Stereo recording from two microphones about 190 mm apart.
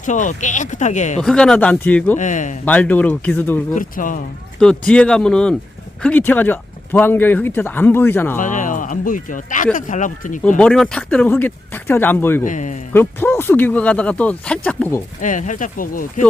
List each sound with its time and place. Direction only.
0.0 s speech: 40° left (ahead or behind)
1.2 s speech: 5° left (ahead or behind)
2.1 s speech: 40° left (ahead or behind)
2.6 s speech: 10° left (ahead or behind)
3.8 s speech: 45° left (ahead or behind)
4.6 s speech: 5° left (ahead or behind)
8.4 s speech: 45° left (ahead or behind)
10.6 s speech: 5° left (ahead or behind)
12.5 s speech: 40° left (ahead or behind)
12.9 s speech: 10° left (ahead or behind)
15.2 s speech: 40° left (ahead or behind)